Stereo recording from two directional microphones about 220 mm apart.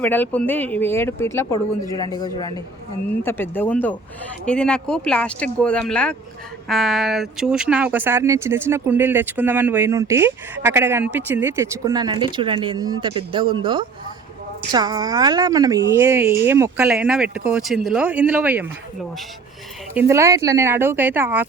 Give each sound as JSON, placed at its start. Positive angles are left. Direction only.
{"t": 0.0, "sound": "speech", "side_deg": 5}
{"t": 19.9, "sound": "speech", "side_deg": -10}